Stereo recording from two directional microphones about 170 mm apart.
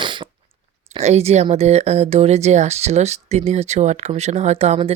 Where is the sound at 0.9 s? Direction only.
40° right (ahead or behind).